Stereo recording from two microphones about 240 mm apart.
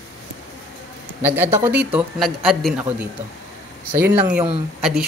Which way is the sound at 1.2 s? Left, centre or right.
Centre.